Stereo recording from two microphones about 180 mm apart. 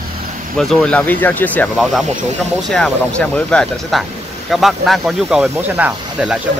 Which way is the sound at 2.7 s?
5° left (ahead or behind).